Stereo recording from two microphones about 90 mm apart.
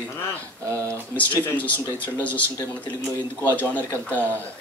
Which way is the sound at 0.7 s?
35° right (ahead or behind).